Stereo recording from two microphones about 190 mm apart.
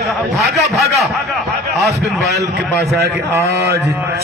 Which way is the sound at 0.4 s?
Centre (ahead or behind).